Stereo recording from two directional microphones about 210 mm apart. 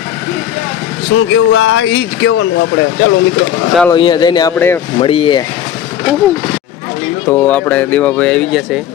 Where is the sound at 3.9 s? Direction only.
20° left (ahead or behind).